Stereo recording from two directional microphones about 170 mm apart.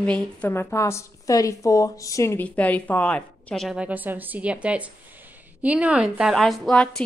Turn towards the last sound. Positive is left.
turn(degrees=5)  # may be behind; listen again after turning